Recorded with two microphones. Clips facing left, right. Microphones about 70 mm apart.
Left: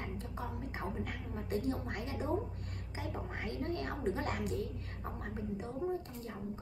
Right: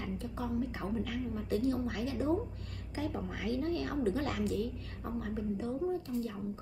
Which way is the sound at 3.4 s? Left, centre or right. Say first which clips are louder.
Right 5 dB; left.